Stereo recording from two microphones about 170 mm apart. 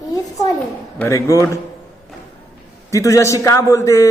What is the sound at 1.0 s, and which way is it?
Speech, 15° left (ahead or behind).